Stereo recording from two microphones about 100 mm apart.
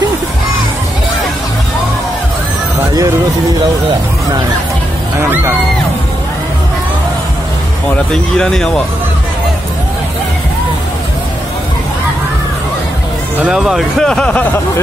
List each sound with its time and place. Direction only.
5.2 s speech: 25° right (ahead or behind)
8.1 s speech: 5° left (ahead or behind)
13.4 s speech: 5° right (ahead or behind); by 14.5 s 15° left (ahead or behind)